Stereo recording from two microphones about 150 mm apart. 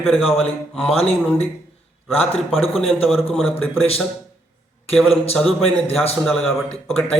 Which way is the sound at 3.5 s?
40° left (ahead or behind).